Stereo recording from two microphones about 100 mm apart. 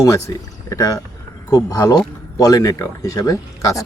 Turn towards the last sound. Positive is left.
turn(degrees=35)  # may be behind; listen again after turning